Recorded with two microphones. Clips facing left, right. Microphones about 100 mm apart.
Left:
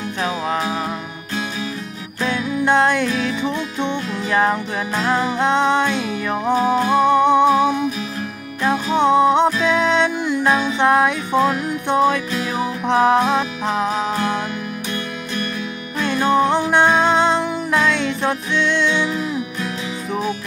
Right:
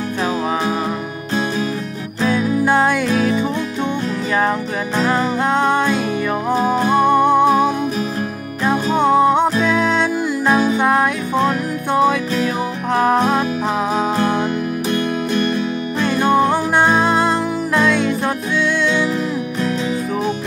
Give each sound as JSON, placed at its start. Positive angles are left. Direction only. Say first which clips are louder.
{"t": 2.6, "sound": "music", "louder": "left 2 dB", "side_deg": -10}
{"t": 4.3, "sound": "music", "louder": "left 1 dB", "side_deg": 0}
{"t": 7.1, "sound": "music", "louder": "even", "side_deg": -5}
{"t": 7.4, "sound": "music", "louder": "right 1 dB", "side_deg": -45}
{"t": 8.9, "sound": "music", "louder": "even", "side_deg": -5}
{"t": 16.3, "sound": "music", "louder": "left 2 dB", "side_deg": -5}